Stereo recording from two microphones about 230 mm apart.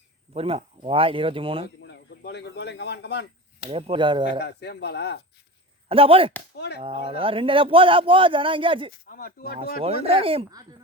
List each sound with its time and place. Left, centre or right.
0.3 s a man's voice: right
1.6 s speech: left
3.7 s a man's voice: right
4.4 s speech: left
5.9 s a man's voice: right
6.6 s speech: left
6.8 s a man's voice: right
9.0 s speech: left
9.8 s a man's voice: right